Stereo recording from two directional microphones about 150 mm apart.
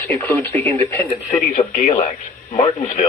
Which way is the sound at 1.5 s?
50° left (ahead or behind).